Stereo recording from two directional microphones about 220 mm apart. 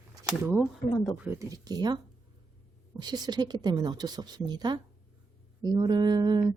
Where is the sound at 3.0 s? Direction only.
20° right (ahead or behind).